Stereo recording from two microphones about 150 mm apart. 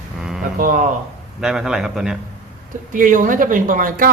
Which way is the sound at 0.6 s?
65° right (ahead or behind).